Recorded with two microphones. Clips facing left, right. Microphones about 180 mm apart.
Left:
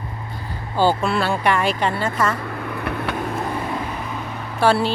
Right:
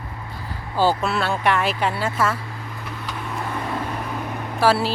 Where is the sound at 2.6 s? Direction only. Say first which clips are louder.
Left 8 dB; 65° left (ahead or behind).